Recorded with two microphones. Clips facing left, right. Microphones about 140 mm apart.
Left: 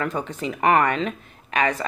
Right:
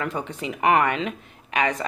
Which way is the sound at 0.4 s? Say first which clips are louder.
Left 1 dB; 15° right (ahead or behind).